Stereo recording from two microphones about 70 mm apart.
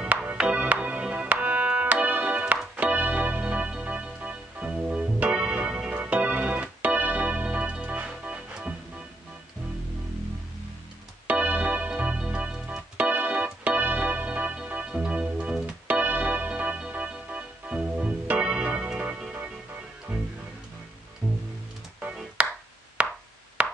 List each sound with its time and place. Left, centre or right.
0.0 s music: centre
5.9 s organ: centre
11.2 s organ: right
16.0 s music: right
22.0 s music: centre
23.0 s a sound: centre